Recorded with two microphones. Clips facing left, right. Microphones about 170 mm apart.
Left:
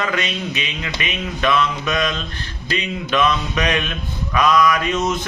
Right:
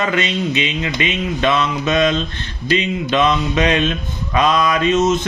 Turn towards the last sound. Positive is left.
turn(degrees=-25)  # may be behind; listen again after turning